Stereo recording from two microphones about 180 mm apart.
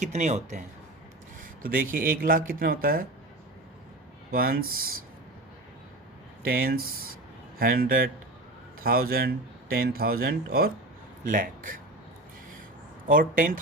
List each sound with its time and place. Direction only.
0.0 s speech: 40° right (ahead or behind)
1.4 s speech: 50° right (ahead or behind)
4.3 s speech: 55° right (ahead or behind)
6.4 s speech: 55° right (ahead or behind)
13.1 s speech: 50° right (ahead or behind)